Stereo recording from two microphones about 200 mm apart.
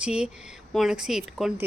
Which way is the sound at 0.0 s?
5° right (ahead or behind).